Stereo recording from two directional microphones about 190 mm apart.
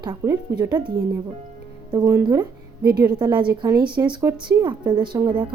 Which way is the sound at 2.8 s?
55° right (ahead or behind).